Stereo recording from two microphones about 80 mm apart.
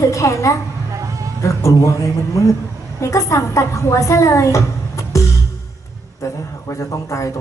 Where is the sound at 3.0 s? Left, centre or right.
Left.